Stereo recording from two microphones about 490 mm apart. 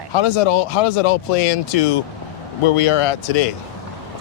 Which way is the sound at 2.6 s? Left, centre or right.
Left.